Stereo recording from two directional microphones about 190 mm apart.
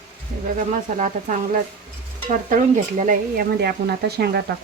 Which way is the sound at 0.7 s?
40° right (ahead or behind).